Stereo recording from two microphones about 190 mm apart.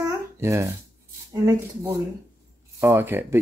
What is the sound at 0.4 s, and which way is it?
Speech, 15° right (ahead or behind).